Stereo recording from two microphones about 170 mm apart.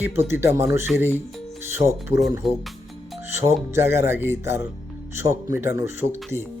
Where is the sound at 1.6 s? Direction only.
15° right (ahead or behind).